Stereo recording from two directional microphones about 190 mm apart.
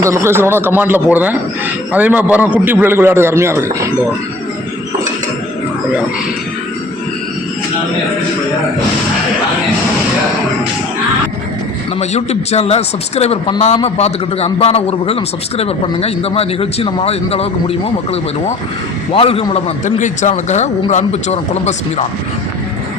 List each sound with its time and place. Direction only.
0.0 s a man's voice: 15° right (ahead or behind)
11.9 s a man's voice: 35° left (ahead or behind)